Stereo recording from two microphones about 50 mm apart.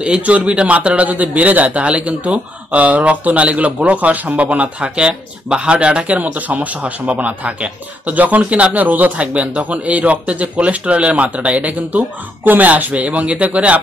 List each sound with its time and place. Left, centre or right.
0.0 s a man's voice: right